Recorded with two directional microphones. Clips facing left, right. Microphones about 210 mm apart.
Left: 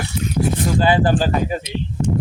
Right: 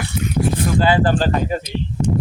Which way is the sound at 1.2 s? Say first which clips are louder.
Even; 5° left (ahead or behind).